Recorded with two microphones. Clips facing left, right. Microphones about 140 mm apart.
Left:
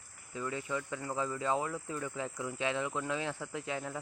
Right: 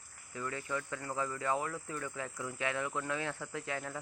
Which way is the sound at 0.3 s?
15° left (ahead or behind).